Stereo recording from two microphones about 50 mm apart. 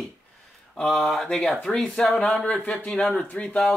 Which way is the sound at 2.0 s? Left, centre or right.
Left.